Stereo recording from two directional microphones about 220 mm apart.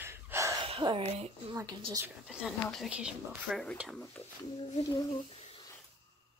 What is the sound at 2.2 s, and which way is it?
Speech, centre (ahead or behind).